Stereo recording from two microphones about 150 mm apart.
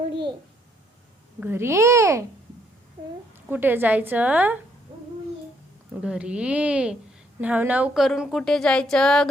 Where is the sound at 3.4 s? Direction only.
15° right (ahead or behind).